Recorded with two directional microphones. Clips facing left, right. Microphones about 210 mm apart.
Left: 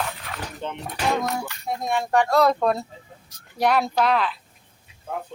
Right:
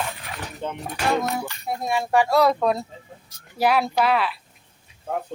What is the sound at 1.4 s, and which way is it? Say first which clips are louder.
Speech: even; 5° right (ahead or behind).